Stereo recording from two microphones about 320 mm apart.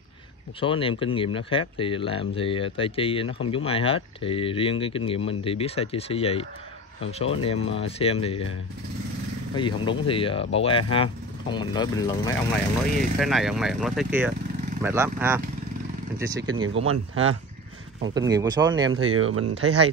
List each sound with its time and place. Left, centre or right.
0.6 s speech: centre
9.6 s speech: centre
13.2 s speech: centre
16.6 s speech: right
18.1 s speech: centre
18.9 s speech: right